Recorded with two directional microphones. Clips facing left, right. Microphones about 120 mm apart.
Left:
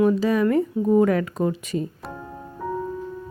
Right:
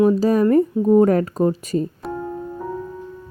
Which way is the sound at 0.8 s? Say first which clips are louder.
Right 3 dB; 30° right (ahead or behind).